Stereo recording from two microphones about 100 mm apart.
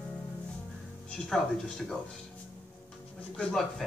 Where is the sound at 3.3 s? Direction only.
10° left (ahead or behind).